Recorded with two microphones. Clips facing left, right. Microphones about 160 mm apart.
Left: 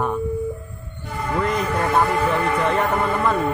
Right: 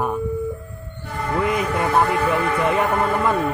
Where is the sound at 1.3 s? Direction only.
10° right (ahead or behind).